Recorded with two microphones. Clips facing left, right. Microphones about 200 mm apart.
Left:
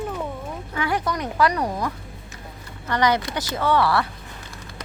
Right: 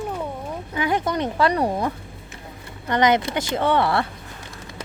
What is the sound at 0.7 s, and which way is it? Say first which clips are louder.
Speech: right 3 dB; 20° right (ahead or behind).